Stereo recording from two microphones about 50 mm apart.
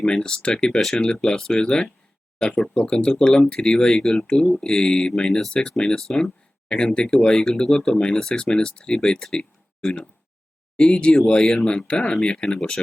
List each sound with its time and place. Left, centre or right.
0.0 s speech: centre